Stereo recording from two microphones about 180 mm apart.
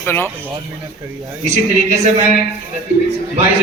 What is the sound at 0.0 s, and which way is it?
Speech, 10° left (ahead or behind).